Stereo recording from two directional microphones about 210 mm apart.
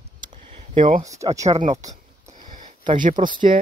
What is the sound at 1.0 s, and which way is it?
Speech, 15° right (ahead or behind).